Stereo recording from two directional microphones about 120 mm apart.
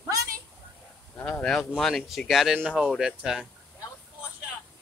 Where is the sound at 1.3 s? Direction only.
5° left (ahead or behind).